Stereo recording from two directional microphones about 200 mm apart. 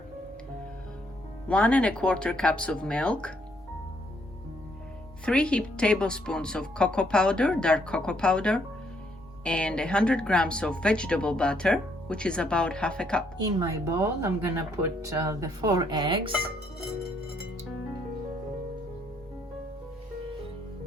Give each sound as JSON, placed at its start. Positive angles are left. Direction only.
{"t": 1.5, "sound": "speech", "side_deg": 5}
{"t": 5.2, "sound": "speech", "side_deg": 5}
{"t": 13.6, "sound": "speech", "side_deg": -15}